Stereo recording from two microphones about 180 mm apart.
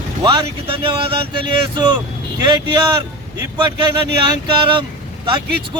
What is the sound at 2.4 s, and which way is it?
Speech, 25° right (ahead or behind).